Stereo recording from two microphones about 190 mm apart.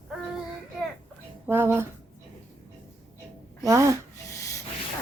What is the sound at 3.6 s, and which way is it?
Speech, 15° right (ahead or behind).